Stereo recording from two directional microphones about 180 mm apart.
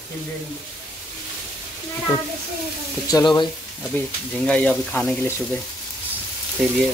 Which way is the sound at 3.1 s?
20° left (ahead or behind).